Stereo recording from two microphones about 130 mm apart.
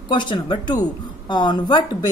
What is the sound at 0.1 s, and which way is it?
Speech, 35° left (ahead or behind).